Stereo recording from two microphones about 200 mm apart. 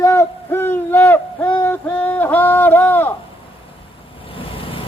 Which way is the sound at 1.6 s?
10° left (ahead or behind).